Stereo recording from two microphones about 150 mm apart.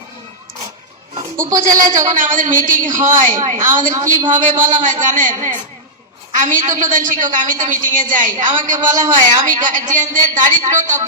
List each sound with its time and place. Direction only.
1.5 s a man's voice: 60° right (ahead or behind)